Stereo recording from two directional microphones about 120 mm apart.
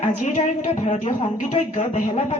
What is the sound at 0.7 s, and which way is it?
Speech, 60° left (ahead or behind).